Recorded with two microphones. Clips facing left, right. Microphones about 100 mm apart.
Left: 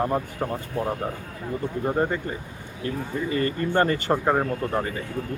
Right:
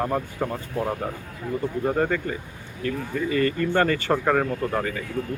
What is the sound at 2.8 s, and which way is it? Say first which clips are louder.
Speech: right 1 dB; 30° left (ahead or behind).